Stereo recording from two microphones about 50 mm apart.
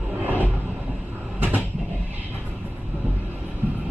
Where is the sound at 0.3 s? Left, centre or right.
Right.